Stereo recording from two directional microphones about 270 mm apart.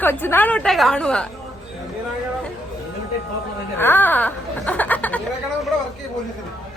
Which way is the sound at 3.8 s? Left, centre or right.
Centre.